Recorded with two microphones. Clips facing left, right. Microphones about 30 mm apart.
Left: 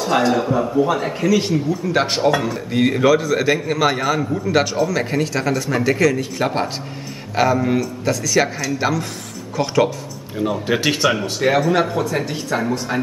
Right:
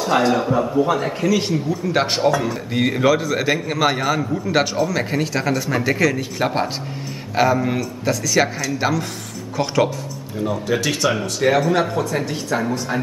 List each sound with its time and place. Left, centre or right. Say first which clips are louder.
0.0 s a man's voice: even; centre
10.3 s speech: left 1 dB; centre
11.3 s a man's voice: right 1 dB; centre